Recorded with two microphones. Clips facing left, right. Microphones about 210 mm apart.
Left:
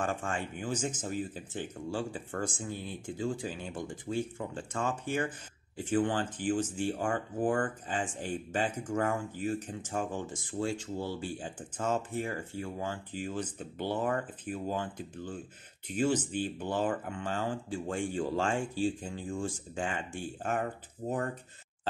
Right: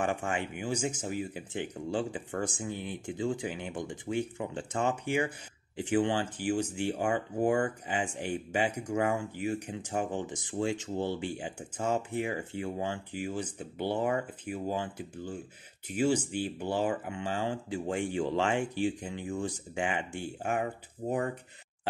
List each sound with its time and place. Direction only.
0.0 s speech: 15° right (ahead or behind)